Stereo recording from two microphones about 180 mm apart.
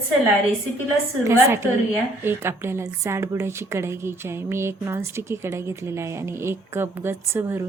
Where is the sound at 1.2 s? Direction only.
15° right (ahead or behind).